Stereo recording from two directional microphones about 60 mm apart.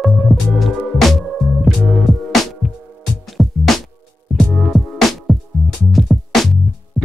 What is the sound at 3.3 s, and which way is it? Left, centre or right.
Music, centre.